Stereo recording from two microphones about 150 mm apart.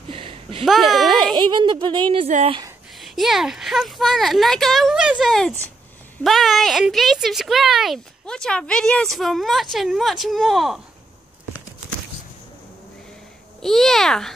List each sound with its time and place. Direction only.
0.1 s a sound: 40° right (ahead or behind)
0.7 s a sound: centre (ahead or behind)
1.1 s speech: 30° right (ahead or behind)
2.2 s speech: 45° right (ahead or behind)
3.0 s speech: centre (ahead or behind)
13.6 s speech: centre (ahead or behind)